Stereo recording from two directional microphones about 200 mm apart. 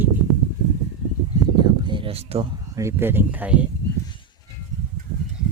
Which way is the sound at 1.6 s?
25° right (ahead or behind).